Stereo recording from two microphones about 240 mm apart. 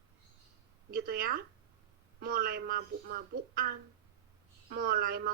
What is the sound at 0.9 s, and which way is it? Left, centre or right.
Speech, right.